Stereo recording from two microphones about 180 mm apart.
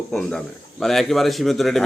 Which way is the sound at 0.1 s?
5° left (ahead or behind).